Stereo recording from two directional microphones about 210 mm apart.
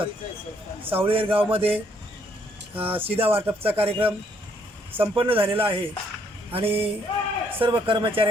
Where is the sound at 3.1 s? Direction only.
25° right (ahead or behind).